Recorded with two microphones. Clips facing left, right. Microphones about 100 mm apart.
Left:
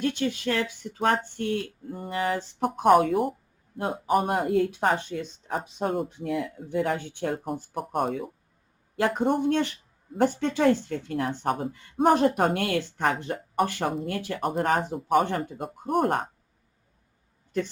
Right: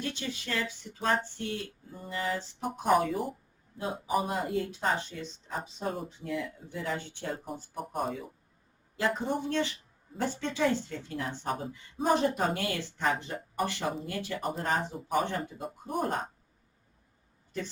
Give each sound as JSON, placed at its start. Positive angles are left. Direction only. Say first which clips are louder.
{"t": 0.0, "sound": "a woman's voice", "louder": "left 10 dB", "side_deg": 55}